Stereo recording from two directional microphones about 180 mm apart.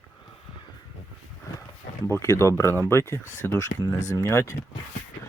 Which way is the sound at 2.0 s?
15° left (ahead or behind).